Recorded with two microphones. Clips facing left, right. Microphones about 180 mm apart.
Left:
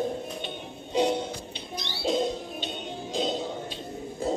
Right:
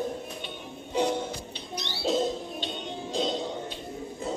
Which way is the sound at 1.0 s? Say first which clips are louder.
Left 2 dB; 15° left (ahead or behind).